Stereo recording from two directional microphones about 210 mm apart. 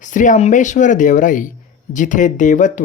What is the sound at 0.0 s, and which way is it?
Speech, 35° left (ahead or behind).